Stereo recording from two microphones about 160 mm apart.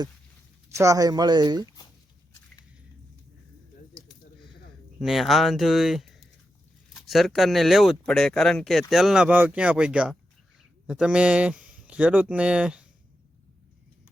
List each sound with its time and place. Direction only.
0.8 s speech: 20° right (ahead or behind)
4.9 s speech: centre (ahead or behind)